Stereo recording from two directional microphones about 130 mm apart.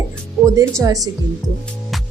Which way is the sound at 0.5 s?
25° right (ahead or behind).